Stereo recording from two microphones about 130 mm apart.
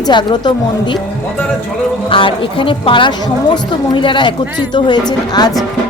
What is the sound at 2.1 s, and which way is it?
Speech, 40° left (ahead or behind).